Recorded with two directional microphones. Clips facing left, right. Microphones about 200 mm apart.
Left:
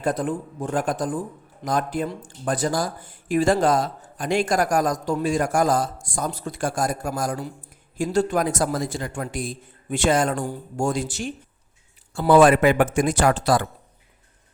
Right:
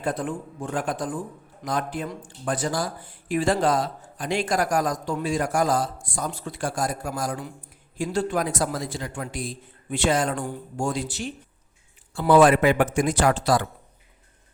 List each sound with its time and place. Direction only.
0.0 s a man's voice: 40° left (ahead or behind)